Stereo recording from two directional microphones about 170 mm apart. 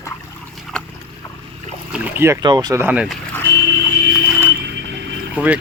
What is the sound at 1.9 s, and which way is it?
Boat, 10° right (ahead or behind).